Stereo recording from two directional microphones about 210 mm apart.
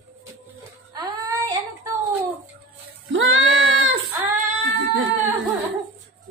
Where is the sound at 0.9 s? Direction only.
20° right (ahead or behind).